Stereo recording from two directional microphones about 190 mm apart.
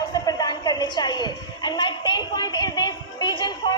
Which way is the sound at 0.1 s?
20° left (ahead or behind).